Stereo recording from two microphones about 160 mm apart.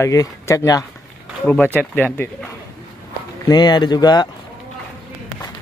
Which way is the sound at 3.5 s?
25° left (ahead or behind).